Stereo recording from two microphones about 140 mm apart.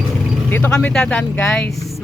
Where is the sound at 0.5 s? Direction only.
10° left (ahead or behind).